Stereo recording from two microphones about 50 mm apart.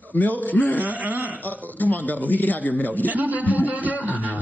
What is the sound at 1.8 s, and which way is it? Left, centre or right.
A man's voice, left.